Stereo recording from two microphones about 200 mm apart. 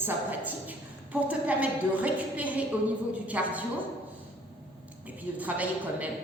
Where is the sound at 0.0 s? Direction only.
10° right (ahead or behind).